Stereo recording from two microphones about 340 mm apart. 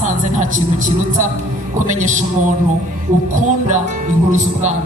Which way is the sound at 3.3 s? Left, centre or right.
Right.